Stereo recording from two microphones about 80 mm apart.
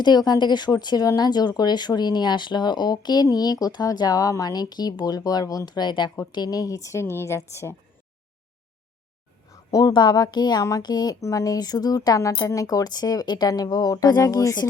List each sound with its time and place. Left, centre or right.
0.0 s speech: left
6.3 s a woman's voice: left
9.5 s a sound: left
9.9 s speech: left
10.6 s a woman's voice: left
10.8 s speech: left
11.2 s a woman's voice: left
12.4 s a woman's voice: left
12.6 s speech: left